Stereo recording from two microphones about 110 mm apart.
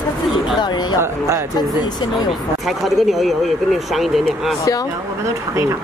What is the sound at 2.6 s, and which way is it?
Speech, centre (ahead or behind).